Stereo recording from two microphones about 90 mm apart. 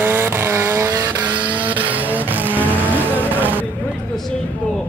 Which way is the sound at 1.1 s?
15° right (ahead or behind).